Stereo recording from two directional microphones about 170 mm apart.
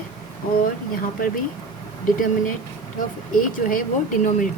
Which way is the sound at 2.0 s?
55° left (ahead or behind).